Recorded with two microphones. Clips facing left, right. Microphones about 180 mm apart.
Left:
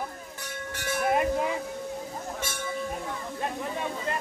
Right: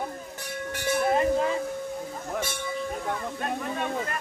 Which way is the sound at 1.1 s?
15° left (ahead or behind).